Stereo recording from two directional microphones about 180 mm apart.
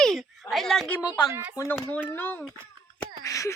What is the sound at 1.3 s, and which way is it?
Speech, 10° right (ahead or behind).